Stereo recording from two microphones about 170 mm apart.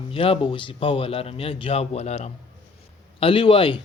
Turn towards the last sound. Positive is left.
turn(degrees=30)  # may be behind; listen again after turning